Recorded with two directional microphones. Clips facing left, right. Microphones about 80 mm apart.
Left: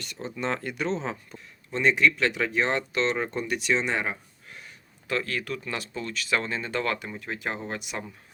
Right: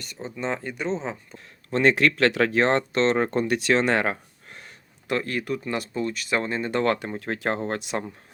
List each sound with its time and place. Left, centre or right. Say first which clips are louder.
0.3 s speech: right 1 dB; centre
1.7 s speech: right 3 dB; right
4.4 s a sound: right 1 dB; right
5.0 s speech: right 3 dB; right
6.9 s speech: right 5 dB; right